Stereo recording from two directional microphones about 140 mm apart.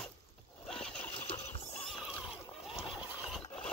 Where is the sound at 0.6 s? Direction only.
5° left (ahead or behind).